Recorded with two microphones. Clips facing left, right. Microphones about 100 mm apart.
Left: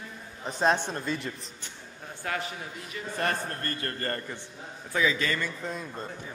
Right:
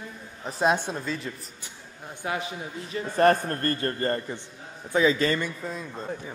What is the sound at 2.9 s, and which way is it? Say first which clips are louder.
Speech: right 10 dB; 40° right (ahead or behind).